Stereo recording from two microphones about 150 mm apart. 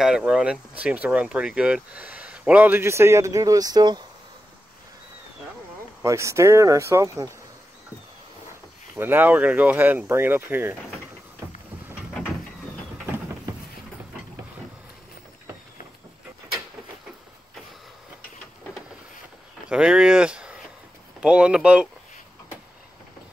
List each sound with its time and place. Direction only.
0.0 s speech: 5° right (ahead or behind); by 4.0 s 25° right (ahead or behind)
6.0 s speech: 20° right (ahead or behind)
8.9 s speech: 15° right (ahead or behind)
19.7 s a sound: 5° right (ahead or behind)
21.2 s speech: 5° right (ahead or behind)